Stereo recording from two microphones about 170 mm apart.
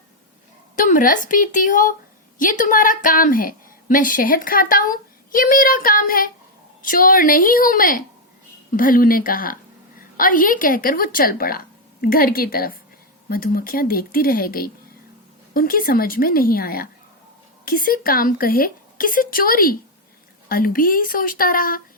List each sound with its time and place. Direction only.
0.8 s a woman's voice: 50° left (ahead or behind)